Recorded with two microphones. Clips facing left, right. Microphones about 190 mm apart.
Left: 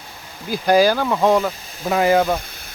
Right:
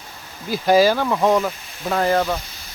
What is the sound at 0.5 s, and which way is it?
Speech, centre (ahead or behind).